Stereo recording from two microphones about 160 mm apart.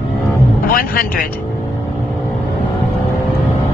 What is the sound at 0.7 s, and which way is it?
Speech, 60° left (ahead or behind).